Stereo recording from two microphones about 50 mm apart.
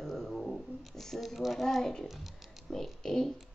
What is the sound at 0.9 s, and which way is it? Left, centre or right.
Speech, centre.